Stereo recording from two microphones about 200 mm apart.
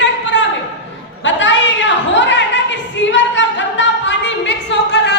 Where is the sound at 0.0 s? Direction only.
65° left (ahead or behind).